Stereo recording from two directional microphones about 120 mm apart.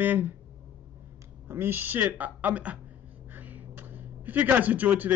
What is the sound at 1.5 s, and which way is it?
Speech, 20° right (ahead or behind).